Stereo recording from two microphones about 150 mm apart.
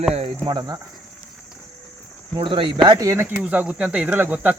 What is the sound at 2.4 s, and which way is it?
Speech, 35° right (ahead or behind).